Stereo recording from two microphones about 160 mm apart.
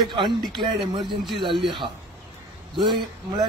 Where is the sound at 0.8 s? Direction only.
Centre (ahead or behind).